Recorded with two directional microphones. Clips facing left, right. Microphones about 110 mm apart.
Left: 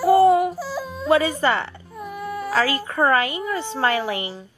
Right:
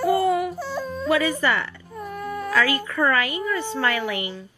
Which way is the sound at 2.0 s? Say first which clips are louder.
Left 1 dB; 5° left (ahead or behind).